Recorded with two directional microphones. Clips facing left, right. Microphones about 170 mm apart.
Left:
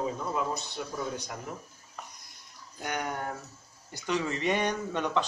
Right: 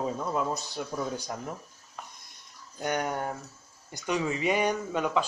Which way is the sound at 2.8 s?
20° right (ahead or behind).